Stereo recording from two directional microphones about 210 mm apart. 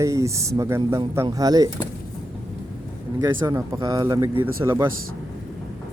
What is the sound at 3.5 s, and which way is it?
Speech, 20° right (ahead or behind).